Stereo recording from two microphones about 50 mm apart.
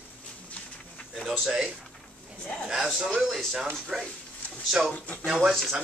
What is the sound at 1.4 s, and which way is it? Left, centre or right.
A man's voice, centre.